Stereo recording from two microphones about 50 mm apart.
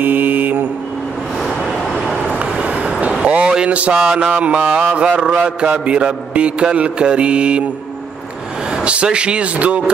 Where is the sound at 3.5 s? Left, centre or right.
Right.